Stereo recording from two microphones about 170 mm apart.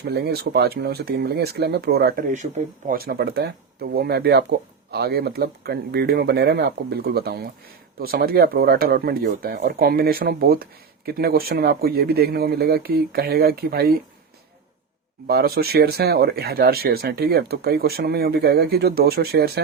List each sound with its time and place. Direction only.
0.1 s speech: 70° right (ahead or behind)
15.3 s speech: 65° right (ahead or behind)